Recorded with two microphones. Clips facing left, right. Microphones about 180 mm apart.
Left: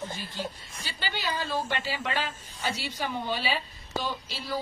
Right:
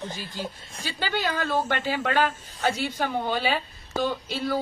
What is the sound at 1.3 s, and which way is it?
A woman's voice, 50° right (ahead or behind).